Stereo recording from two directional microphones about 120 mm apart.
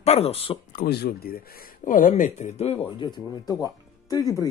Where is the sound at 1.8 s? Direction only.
90° left; by 2.8 s 60° left (ahead or behind).